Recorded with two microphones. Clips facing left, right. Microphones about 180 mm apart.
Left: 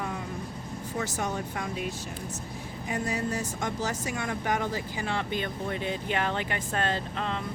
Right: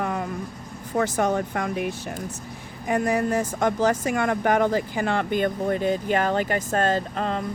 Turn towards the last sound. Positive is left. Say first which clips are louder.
# right 6 dB
turn(degrees=-45)  # may be behind; listen again after turning